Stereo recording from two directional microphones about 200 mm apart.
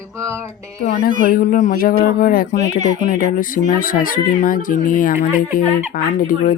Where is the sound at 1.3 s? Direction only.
45° left (ahead or behind).